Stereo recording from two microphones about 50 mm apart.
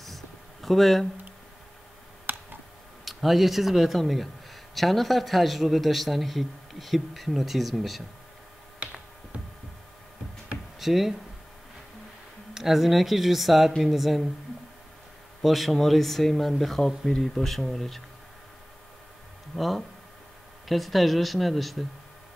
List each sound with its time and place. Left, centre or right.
0.0 s a sound: centre
2.2 s tick: right
3.1 s a man's voice: centre
8.7 s finger snapping: right
10.8 s speech: centre
12.5 s a man's voice: centre
15.4 s a man's voice: centre
19.5 s a man's voice: centre